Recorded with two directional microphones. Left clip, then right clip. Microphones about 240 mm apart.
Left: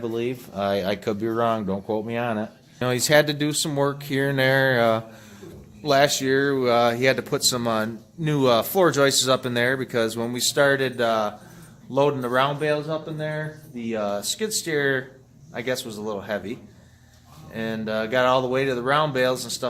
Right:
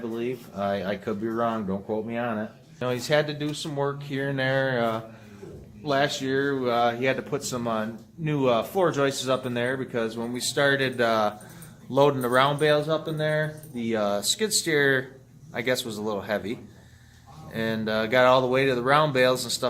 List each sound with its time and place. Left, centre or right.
0.1 s speech: left
10.5 s speech: left; by 19.6 s centre